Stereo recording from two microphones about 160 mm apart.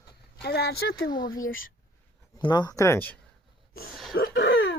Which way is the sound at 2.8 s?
15° left (ahead or behind).